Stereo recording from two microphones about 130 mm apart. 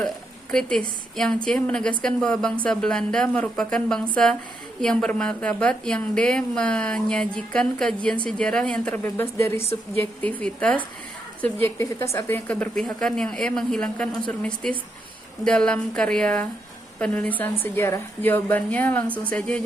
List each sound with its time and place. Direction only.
0.5 s a woman's voice: 5° left (ahead or behind)
12.5 s a woman's voice: 5° left (ahead or behind)